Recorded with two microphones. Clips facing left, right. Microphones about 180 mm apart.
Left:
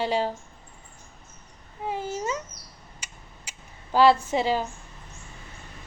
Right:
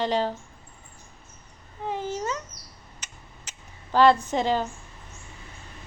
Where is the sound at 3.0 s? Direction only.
10° left (ahead or behind).